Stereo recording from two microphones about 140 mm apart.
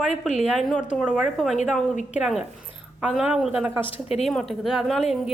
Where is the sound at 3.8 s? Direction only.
45° left (ahead or behind).